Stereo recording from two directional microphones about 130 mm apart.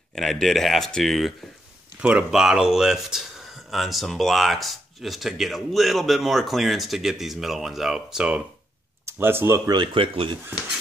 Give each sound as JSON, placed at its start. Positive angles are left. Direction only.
{"t": 0.1, "sound": "speech", "side_deg": 0}
{"t": 9.0, "sound": "speech", "side_deg": -15}
{"t": 9.7, "sound": "speech", "side_deg": -40}